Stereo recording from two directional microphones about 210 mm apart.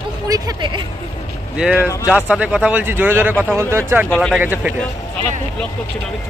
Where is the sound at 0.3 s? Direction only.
20° right (ahead or behind).